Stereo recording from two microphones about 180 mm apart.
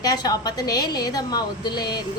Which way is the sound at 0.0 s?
20° left (ahead or behind).